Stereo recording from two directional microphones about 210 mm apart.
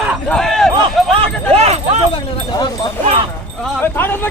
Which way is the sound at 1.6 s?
30° right (ahead or behind).